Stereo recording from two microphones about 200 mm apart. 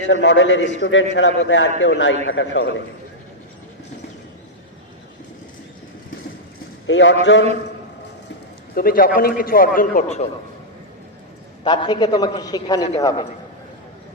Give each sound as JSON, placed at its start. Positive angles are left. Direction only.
{"t": 0.1, "sound": "a man's voice", "side_deg": 65}
{"t": 6.8, "sound": "a man's voice", "side_deg": 65}
{"t": 8.7, "sound": "speech", "side_deg": 45}
{"t": 11.6, "sound": "a man's voice", "side_deg": 20}